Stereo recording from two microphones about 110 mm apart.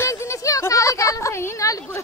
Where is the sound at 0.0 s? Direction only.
25° left (ahead or behind).